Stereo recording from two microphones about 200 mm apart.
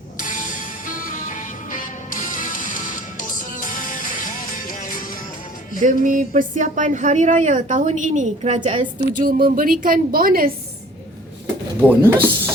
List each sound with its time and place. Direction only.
0.2 s music: 40° left (ahead or behind)
5.8 s a woman's voice: 40° right (ahead or behind)
11.8 s speech: 10° right (ahead or behind)